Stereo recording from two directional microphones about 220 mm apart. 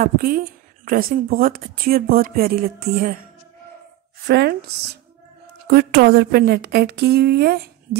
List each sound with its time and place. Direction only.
0.0 s speech: 40° right (ahead or behind)
4.3 s speech: 50° right (ahead or behind)
5.7 s speech: 45° right (ahead or behind)